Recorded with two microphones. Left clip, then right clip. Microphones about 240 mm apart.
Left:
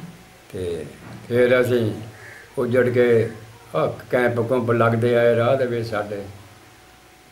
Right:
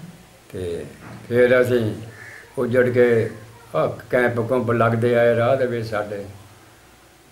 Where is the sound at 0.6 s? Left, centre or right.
Centre.